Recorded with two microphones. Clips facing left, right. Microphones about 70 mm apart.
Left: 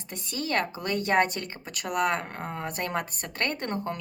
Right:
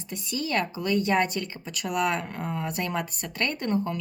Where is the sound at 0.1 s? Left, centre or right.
Left.